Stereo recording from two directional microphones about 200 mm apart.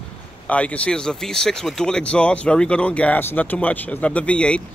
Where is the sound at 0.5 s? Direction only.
5° left (ahead or behind).